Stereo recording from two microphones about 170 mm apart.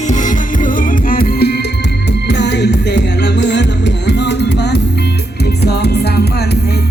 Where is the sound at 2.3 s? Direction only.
90° left; by 6.3 s 70° left (ahead or behind).